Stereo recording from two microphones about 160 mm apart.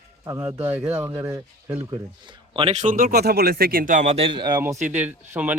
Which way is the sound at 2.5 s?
35° right (ahead or behind).